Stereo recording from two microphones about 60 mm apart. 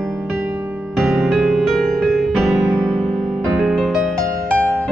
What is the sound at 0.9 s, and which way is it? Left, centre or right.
Music, centre.